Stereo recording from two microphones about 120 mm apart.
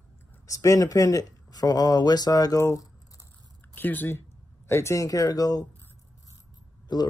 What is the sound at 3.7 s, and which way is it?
Speech, 15° left (ahead or behind).